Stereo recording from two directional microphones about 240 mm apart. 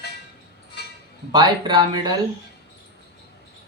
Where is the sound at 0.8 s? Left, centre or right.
Left.